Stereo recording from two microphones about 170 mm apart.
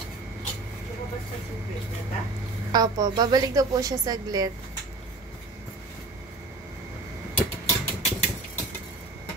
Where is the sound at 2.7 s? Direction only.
25° right (ahead or behind).